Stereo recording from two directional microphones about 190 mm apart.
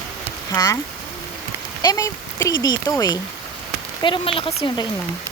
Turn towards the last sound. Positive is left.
turn(degrees=25)  # may be behind; listen again after turning